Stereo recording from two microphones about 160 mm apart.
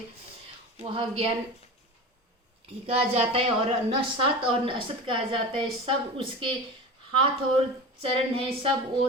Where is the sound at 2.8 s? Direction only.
40° right (ahead or behind).